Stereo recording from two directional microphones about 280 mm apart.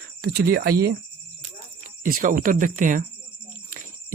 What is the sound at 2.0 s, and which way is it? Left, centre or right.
Speech, right.